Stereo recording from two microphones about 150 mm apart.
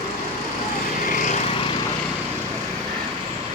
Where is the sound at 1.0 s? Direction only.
50° left (ahead or behind).